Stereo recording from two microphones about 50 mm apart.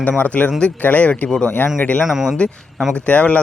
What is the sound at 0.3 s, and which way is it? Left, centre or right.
Speech, left.